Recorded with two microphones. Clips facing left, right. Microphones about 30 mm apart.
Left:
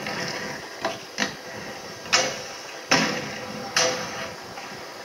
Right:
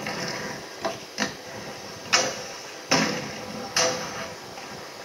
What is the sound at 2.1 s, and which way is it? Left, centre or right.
Tick-tock, centre.